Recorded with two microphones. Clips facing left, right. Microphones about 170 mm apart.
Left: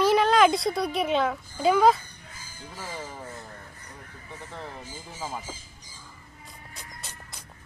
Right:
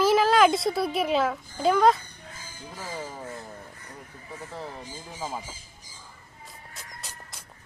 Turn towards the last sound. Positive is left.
turn(degrees=0)  # may be behind; listen again after turning